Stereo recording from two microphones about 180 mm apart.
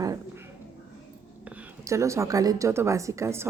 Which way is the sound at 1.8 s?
15° right (ahead or behind).